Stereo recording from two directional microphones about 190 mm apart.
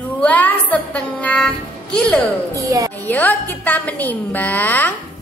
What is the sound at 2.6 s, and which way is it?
Speech, 20° right (ahead or behind).